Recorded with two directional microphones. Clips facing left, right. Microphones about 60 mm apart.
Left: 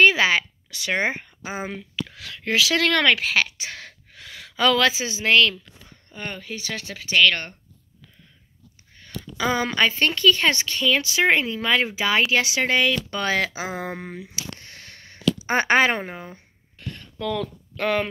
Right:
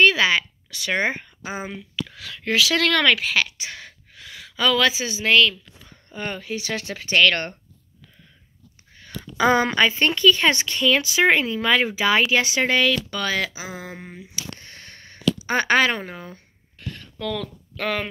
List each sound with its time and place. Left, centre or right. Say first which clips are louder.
0.0 s speech: even; left
1.7 s speech: even; left
2.4 s a woman's voice: even; left
3.8 s gasp: even; left
4.9 s a woman's voice: even; left
6.0 s speech: right 4 dB; centre
9.4 s a woman's voice: right 5 dB; right
9.8 s speech: right 2 dB; centre
12.8 s speech: right 1 dB; left
14.6 s sniff: right 1 dB; centre
15.4 s speech: left 1 dB; left
17.7 s speech: left 3 dB; centre